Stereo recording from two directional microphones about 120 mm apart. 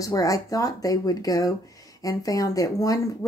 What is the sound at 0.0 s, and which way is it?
A woman's voice, 30° left (ahead or behind).